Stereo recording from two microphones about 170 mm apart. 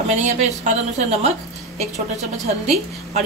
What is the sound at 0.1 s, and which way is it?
Speech, 40° right (ahead or behind).